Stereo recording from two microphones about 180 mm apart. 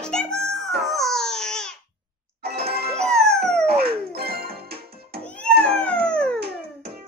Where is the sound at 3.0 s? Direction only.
5° left (ahead or behind).